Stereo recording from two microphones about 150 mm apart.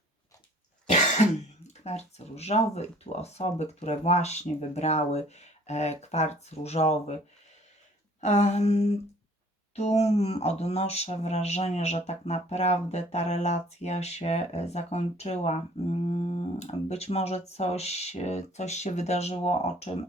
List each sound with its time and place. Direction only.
0.9 s speech: 50° left (ahead or behind)
8.2 s speech: 50° left (ahead or behind)